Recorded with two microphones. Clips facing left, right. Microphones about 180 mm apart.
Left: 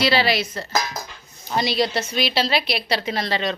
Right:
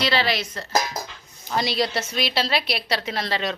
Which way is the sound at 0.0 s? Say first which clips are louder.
Left 3 dB; 10° left (ahead or behind).